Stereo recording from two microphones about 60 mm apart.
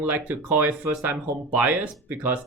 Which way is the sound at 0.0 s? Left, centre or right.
Right.